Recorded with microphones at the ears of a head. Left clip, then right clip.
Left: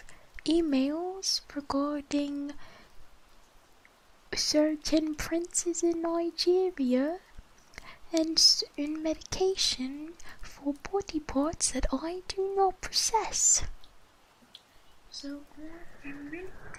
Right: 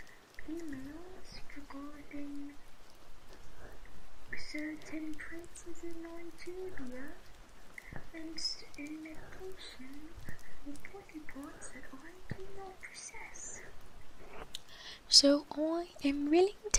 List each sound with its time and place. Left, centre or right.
0.4 s speech: left
4.3 s speech: left
14.8 s speech: right